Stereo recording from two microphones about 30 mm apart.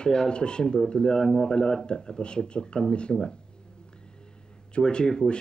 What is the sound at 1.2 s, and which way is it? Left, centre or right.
Speech, centre.